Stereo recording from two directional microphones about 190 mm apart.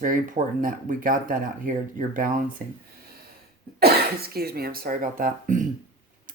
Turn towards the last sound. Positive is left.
turn(degrees=-45)  # may be behind; listen again after turning